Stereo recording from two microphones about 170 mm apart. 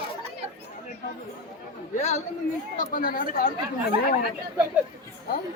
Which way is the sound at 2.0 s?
40° left (ahead or behind).